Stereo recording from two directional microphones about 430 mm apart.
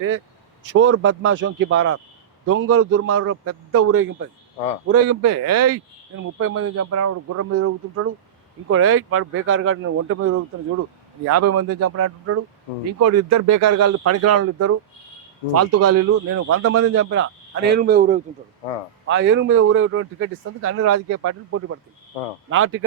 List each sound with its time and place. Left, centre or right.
0.6 s a man's voice: right
11.3 s a man's voice: right